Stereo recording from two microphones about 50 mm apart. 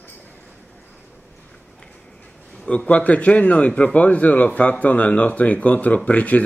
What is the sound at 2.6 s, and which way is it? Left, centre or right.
Speech, left.